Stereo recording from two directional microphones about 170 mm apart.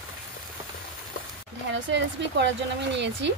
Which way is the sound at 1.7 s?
90° right.